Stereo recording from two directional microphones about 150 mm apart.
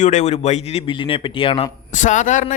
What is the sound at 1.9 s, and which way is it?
Speech, 55° left (ahead or behind).